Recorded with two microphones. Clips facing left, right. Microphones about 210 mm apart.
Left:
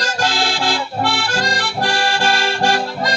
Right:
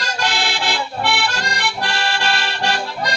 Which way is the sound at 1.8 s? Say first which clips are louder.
Left 6 dB; 45° left (ahead or behind).